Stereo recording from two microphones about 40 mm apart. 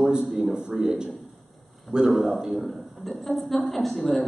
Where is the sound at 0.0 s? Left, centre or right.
Centre.